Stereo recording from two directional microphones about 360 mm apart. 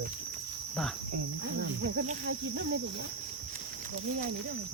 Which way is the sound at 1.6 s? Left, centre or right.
Right.